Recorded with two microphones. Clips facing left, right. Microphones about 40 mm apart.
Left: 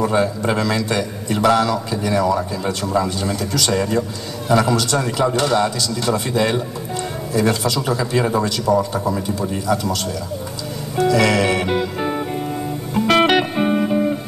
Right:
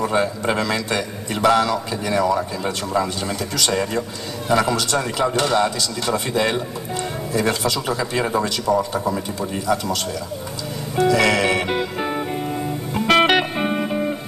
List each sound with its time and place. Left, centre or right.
0.1 s a man's voice: right
11.0 s music: right